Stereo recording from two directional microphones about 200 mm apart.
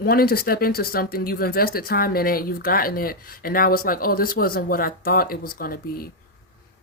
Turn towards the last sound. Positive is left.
turn(degrees=45)  # may be behind; listen again after turning